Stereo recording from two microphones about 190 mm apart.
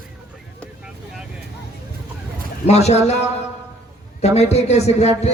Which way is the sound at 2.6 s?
35° left (ahead or behind).